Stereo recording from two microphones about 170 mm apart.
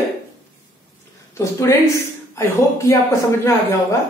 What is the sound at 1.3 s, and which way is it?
Speech, 15° left (ahead or behind).